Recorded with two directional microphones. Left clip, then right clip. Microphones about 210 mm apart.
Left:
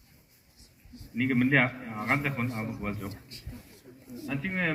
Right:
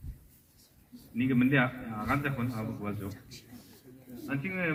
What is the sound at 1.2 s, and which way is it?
A man's voice, 20° left (ahead or behind).